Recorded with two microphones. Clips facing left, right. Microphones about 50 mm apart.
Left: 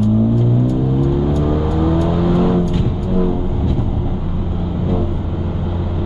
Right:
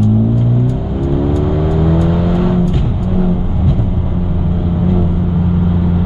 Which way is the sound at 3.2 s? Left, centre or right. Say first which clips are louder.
Right 1 dB; centre.